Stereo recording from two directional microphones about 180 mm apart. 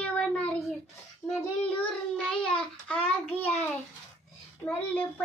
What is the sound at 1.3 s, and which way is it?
Child singing, 5° left (ahead or behind).